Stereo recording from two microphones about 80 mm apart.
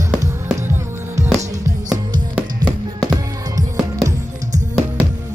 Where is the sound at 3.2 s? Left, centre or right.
Right.